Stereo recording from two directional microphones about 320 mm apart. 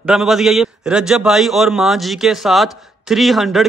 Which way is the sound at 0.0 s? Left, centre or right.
Centre.